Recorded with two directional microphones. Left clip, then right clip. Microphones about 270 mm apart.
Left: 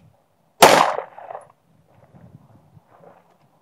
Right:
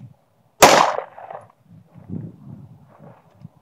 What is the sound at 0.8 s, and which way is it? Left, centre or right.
Gunshot, right.